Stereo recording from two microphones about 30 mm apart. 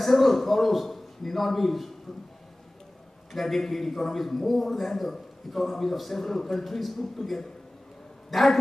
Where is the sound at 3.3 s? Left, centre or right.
Centre.